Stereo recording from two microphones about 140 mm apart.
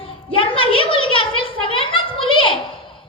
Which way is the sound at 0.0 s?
40° left (ahead or behind).